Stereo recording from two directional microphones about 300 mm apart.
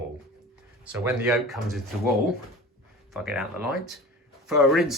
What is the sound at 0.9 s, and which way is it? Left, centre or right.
Speech, centre.